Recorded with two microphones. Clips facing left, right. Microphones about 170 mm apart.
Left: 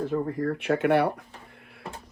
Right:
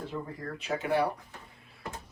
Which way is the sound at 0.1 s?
55° left (ahead or behind).